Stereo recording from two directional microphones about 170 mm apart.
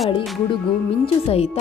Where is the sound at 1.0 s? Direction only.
35° left (ahead or behind).